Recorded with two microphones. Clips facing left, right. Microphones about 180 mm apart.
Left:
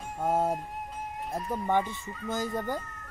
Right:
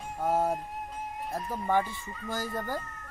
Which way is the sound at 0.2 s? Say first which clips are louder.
Even; centre (ahead or behind).